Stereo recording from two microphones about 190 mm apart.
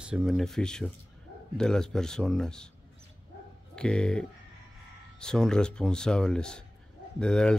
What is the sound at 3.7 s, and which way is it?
Speech, 5° left (ahead or behind).